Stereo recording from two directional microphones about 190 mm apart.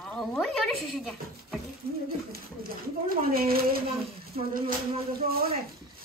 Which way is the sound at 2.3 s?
50° right (ahead or behind).